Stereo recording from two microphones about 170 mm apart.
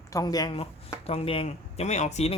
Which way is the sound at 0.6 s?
35° left (ahead or behind).